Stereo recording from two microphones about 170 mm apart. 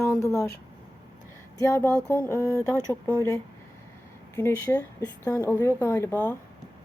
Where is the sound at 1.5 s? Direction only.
20° left (ahead or behind).